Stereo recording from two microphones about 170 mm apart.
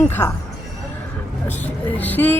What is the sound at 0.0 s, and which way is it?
Speech, 10° left (ahead or behind).